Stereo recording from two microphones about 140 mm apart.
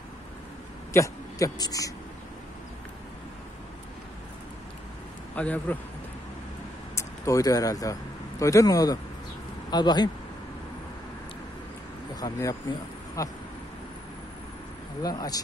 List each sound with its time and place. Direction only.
0.9 s speech: 25° left (ahead or behind)
5.3 s a man's voice: 10° left (ahead or behind)
7.0 s a man's voice: 20° left (ahead or behind)
12.2 s speech: 25° left (ahead or behind)
15.0 s speech: 25° left (ahead or behind)